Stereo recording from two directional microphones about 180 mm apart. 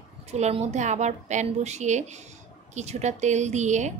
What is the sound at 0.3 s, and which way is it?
A woman's voice, 35° right (ahead or behind).